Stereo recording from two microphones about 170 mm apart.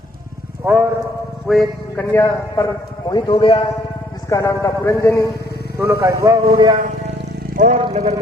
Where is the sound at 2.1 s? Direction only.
20° left (ahead or behind).